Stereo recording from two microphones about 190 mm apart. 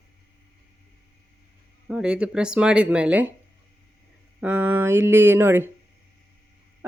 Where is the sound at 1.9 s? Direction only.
5° right (ahead or behind).